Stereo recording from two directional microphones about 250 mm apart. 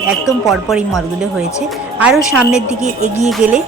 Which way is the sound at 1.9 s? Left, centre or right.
Centre.